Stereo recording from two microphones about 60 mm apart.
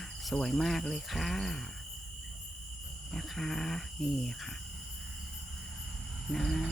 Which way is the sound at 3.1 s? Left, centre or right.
Centre.